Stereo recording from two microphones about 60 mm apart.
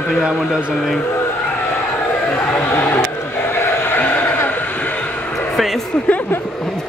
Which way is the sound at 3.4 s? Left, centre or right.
Left.